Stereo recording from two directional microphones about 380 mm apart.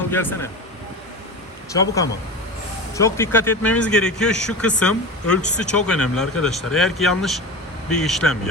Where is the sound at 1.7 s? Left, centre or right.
Centre.